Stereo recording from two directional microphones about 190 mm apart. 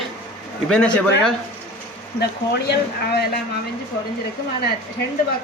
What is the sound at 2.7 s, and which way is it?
Speech, 60° left (ahead or behind).